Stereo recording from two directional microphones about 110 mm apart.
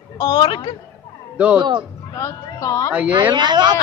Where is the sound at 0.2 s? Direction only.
40° left (ahead or behind).